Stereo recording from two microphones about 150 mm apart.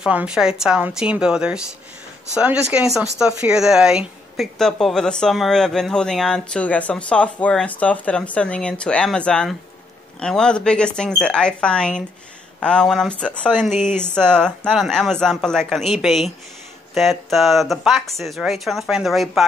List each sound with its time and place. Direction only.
0.0 s speech: 10° right (ahead or behind)
13.7 s speech: 55° left (ahead or behind)
14.1 s speech: 5° left (ahead or behind)